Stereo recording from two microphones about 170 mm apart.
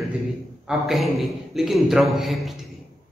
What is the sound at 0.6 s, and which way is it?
A woman's voice, centre (ahead or behind).